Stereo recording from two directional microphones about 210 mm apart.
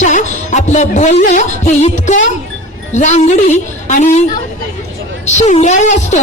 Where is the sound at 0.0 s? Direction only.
35° left (ahead or behind).